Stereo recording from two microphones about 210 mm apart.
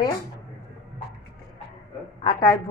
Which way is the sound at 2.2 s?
20° left (ahead or behind).